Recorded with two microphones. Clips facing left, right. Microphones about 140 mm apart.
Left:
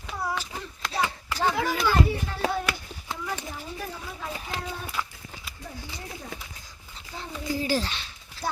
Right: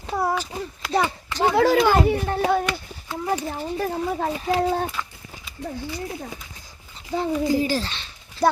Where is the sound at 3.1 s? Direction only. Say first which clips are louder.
Right 10 dB; 45° right (ahead or behind).